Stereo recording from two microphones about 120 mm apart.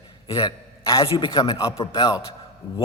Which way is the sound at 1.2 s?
40° left (ahead or behind).